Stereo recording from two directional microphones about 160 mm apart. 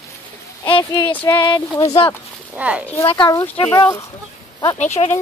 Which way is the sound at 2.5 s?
10° right (ahead or behind).